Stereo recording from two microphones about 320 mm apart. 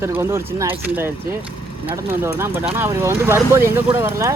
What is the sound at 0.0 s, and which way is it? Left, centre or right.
Speech, centre.